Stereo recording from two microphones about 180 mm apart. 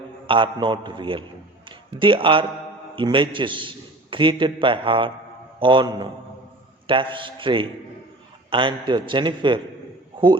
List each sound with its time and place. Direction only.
0.3 s a man's voice: 30° right (ahead or behind)